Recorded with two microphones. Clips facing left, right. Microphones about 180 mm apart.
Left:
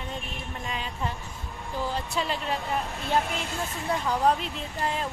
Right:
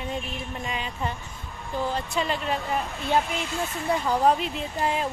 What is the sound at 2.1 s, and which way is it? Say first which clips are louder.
Speech: right 2 dB; centre (ahead or behind).